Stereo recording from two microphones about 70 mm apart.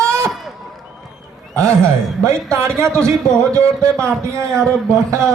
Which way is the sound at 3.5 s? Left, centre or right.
Right.